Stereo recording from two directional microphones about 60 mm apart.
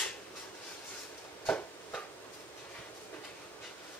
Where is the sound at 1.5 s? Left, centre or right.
Left.